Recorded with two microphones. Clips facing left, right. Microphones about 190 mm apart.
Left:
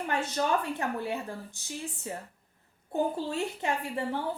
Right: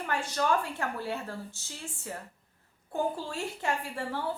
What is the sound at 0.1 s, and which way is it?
A woman's voice, 20° left (ahead or behind).